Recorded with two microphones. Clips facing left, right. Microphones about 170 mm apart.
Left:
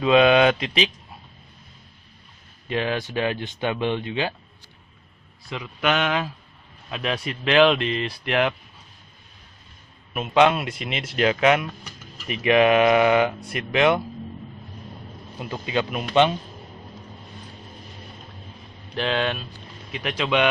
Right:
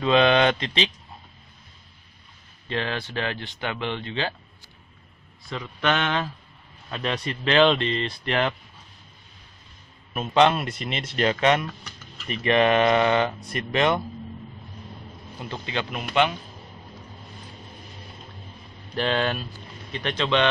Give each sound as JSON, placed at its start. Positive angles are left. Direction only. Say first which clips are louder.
{"t": 0.0, "sound": "speech", "louder": "left 3 dB", "side_deg": 5}
{"t": 2.7, "sound": "speech", "louder": "left 4 dB", "side_deg": 15}
{"t": 5.5, "sound": "speech", "louder": "left 1 dB", "side_deg": 10}
{"t": 10.3, "sound": "speech", "louder": "left 1 dB", "side_deg": 5}
{"t": 15.3, "sound": "speech", "louder": "left 5 dB", "side_deg": 15}
{"t": 18.9, "sound": "speech", "louder": "even", "side_deg": 0}